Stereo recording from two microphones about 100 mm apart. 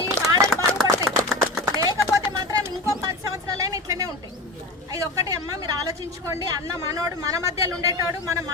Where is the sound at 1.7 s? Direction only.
35° right (ahead or behind).